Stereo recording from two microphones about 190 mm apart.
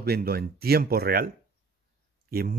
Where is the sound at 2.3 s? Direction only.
50° right (ahead or behind).